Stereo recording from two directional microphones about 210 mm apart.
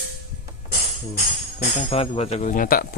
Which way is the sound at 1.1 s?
30° left (ahead or behind).